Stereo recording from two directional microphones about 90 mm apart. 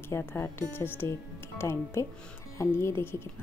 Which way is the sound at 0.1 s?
30° left (ahead or behind).